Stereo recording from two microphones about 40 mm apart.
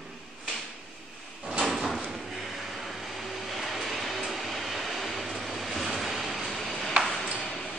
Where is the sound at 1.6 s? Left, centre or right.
Centre.